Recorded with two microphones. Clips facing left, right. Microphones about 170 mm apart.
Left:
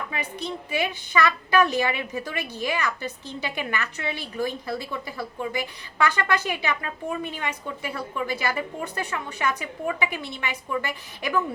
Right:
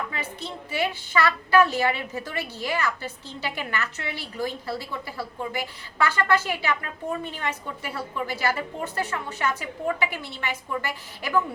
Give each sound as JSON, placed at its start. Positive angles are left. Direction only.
{"t": 0.1, "sound": "a woman's voice", "side_deg": 15}